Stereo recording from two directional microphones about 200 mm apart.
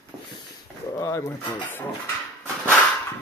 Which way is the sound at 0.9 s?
15° left (ahead or behind).